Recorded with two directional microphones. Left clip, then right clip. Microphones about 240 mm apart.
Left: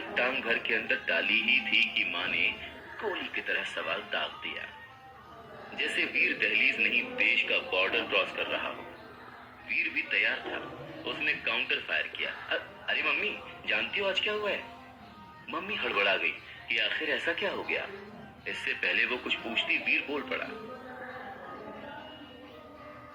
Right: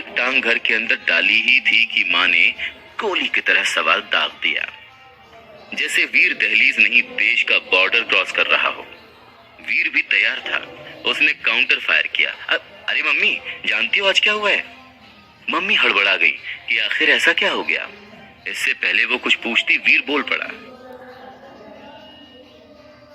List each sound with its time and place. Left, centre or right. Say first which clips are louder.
0.1 s a man's voice: right 12 dB; right
5.7 s a man's voice: right 13 dB; right